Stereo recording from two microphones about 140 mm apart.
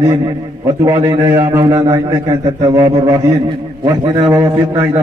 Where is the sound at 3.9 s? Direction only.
25° right (ahead or behind).